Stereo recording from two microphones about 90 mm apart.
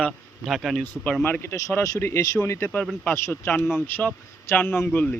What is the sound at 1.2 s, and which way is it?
Speech, 25° left (ahead or behind).